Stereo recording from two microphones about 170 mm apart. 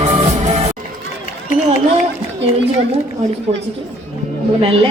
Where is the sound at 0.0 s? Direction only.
45° right (ahead or behind).